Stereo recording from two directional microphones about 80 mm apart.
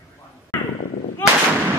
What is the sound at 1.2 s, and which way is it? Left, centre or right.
Artillery fire, left.